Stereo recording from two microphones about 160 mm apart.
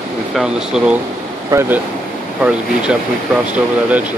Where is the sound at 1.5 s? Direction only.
15° right (ahead or behind).